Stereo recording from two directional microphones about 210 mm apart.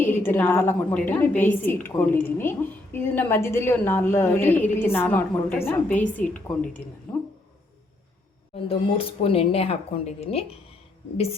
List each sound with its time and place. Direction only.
0.0 s a woman's voice: 10° left (ahead or behind)
8.5 s speech: 25° left (ahead or behind)